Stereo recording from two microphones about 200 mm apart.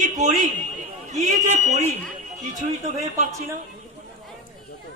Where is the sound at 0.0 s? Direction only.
40° right (ahead or behind).